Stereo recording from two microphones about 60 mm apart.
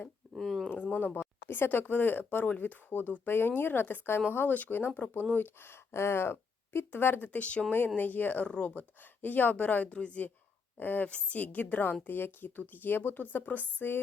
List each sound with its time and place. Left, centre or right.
0.3 s a sound: centre
0.9 s a woman's voice: left
7.3 s a woman's voice: left
8.4 s speech: centre
9.2 s a woman's voice: left